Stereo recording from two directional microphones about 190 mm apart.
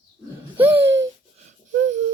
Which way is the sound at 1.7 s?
40° right (ahead or behind).